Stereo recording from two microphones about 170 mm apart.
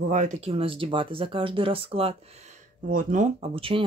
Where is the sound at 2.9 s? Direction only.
50° right (ahead or behind); by 3.8 s 30° right (ahead or behind).